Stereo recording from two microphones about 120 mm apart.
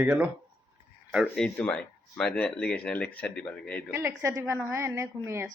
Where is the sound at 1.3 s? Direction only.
10° left (ahead or behind).